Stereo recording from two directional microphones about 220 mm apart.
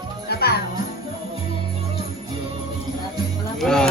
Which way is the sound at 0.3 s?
45° left (ahead or behind).